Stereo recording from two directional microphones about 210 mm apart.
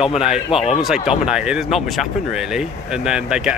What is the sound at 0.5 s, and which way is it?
Speech, 25° left (ahead or behind).